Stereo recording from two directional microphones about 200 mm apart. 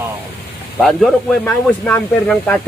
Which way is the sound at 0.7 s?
Centre (ahead or behind).